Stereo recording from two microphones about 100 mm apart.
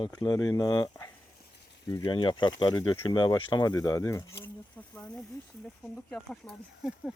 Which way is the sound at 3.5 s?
40° left (ahead or behind).